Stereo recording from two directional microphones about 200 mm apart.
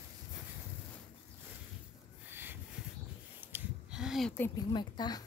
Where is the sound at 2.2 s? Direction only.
10° right (ahead or behind).